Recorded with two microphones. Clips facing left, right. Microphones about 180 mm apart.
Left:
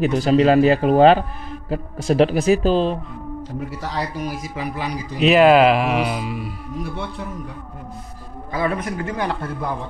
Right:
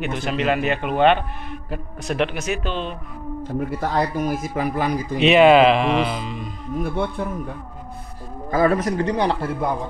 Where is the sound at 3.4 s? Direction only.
55° right (ahead or behind).